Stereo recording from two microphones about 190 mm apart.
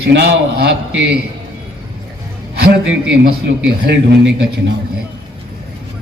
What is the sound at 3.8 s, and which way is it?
Speech, 65° right (ahead or behind).